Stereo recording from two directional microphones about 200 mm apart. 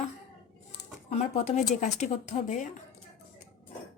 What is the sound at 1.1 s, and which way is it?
A woman's voice, 35° left (ahead or behind).